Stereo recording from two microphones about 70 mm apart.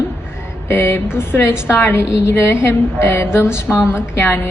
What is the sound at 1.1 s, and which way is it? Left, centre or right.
A woman's voice, left.